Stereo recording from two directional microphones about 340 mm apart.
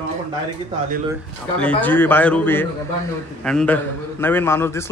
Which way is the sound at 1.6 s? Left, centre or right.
Centre.